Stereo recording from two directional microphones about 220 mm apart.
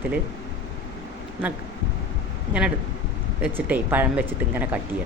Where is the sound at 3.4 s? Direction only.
10° right (ahead or behind).